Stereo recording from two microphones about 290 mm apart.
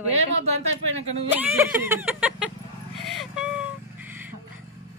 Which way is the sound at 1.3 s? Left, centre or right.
Centre.